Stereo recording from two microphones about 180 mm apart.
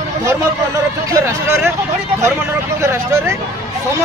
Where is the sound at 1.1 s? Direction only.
15° right (ahead or behind).